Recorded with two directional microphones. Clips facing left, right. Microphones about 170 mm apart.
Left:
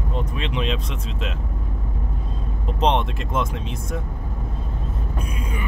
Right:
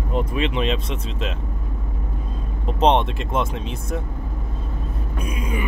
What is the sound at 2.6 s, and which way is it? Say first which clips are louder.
Speech: right 3 dB; centre (ahead or behind).